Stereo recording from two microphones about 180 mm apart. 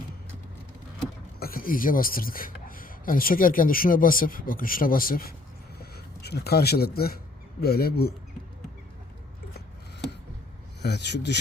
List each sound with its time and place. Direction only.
1.4 s speech: 55° left (ahead or behind)
5.8 s speech: 65° left (ahead or behind)
10.8 s speech: 70° left (ahead or behind)